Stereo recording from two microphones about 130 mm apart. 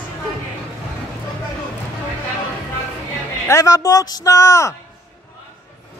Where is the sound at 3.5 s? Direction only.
25° left (ahead or behind).